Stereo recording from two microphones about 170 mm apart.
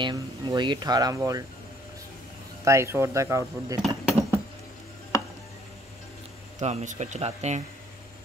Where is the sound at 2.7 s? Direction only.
15° right (ahead or behind).